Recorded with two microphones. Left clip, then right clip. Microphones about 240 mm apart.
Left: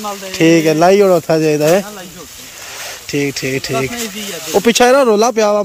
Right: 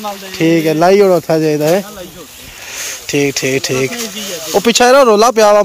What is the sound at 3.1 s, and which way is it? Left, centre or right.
Speech, centre.